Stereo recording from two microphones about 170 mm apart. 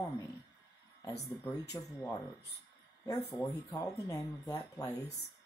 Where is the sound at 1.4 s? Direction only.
20° left (ahead or behind).